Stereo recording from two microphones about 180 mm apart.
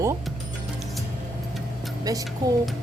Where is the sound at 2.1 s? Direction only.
20° right (ahead or behind).